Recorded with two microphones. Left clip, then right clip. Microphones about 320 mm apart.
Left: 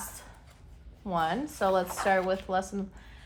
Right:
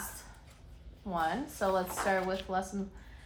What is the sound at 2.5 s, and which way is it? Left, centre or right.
Speech, left.